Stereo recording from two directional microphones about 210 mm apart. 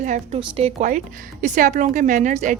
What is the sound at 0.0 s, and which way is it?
Speech, 35° right (ahead or behind).